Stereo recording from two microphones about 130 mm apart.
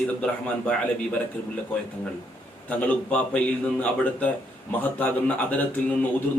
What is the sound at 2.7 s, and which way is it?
Speech, 10° left (ahead or behind).